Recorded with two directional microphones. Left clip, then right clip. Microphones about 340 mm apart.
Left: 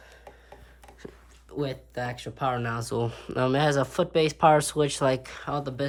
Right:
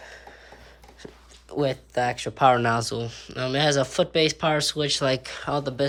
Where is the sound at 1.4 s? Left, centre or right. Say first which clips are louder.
Right 7 dB; centre.